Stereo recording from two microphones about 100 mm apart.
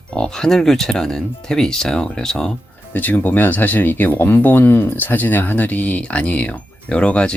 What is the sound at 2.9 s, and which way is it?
Speech, 15° left (ahead or behind).